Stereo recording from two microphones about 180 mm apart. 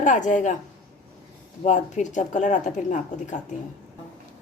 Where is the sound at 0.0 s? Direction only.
45° left (ahead or behind).